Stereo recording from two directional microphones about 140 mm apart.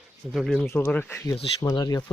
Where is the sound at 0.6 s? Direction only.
15° left (ahead or behind).